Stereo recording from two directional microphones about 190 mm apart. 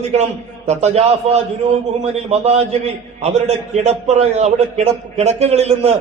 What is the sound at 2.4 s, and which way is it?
A man's voice, 35° right (ahead or behind).